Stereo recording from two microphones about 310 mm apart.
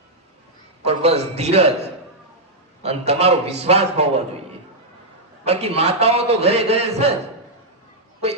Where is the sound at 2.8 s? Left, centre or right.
Centre.